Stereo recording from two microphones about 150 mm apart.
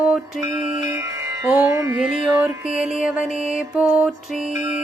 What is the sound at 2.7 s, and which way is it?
Music, 5° right (ahead or behind).